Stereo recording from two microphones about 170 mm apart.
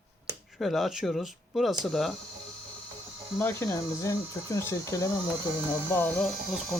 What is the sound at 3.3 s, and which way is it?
Speech, 15° left (ahead or behind).